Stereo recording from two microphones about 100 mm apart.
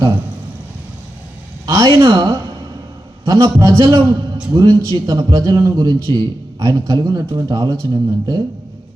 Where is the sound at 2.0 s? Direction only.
35° right (ahead or behind).